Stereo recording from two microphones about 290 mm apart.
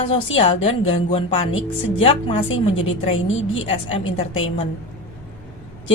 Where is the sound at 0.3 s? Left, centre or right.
Centre.